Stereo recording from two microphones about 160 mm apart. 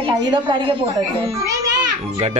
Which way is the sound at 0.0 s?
30° right (ahead or behind).